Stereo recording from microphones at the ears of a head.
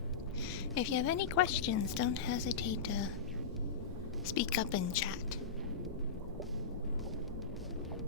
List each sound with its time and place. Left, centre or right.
0.7 s a woman's voice: left
4.3 s a woman's voice: left